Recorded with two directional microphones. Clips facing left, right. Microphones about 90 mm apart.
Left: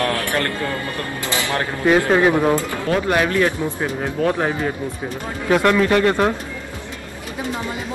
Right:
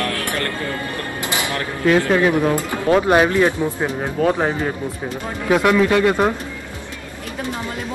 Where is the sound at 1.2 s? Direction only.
20° right (ahead or behind).